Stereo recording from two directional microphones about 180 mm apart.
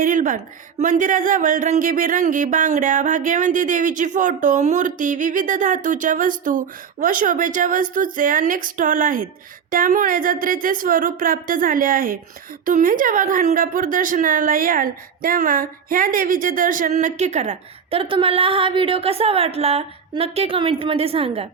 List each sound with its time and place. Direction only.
0.0 s a woman's voice: 50° right (ahead or behind); by 21.4 s 30° right (ahead or behind)